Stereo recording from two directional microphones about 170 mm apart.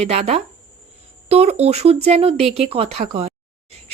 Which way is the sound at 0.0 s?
40° right (ahead or behind).